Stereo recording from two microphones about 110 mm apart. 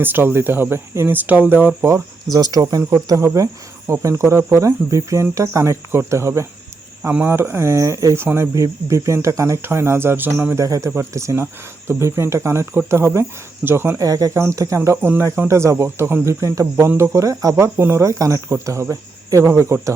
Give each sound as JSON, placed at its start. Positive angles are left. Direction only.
{"t": 0.0, "sound": "speech", "side_deg": -15}
{"t": 2.3, "sound": "speech", "side_deg": -35}